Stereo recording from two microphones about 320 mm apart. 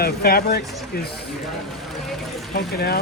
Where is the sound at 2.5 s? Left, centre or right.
Left.